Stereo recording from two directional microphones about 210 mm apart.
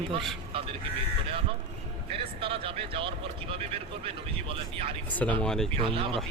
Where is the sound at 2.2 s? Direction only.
25° right (ahead or behind).